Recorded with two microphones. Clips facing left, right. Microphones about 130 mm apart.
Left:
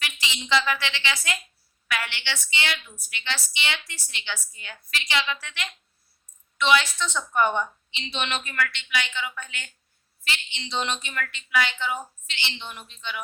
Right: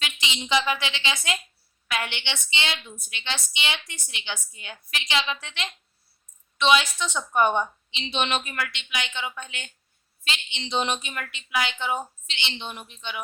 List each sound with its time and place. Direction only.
0.0 s a woman's voice: 20° right (ahead or behind)